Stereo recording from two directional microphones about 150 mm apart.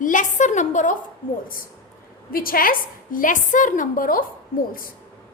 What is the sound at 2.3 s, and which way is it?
A woman's voice, 75° left (ahead or behind).